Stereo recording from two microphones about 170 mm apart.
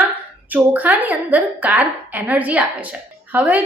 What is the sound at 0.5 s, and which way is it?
A woman's voice, 10° right (ahead or behind).